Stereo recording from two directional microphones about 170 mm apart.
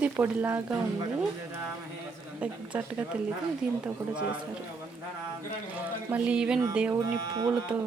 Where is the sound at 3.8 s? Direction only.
5° right (ahead or behind).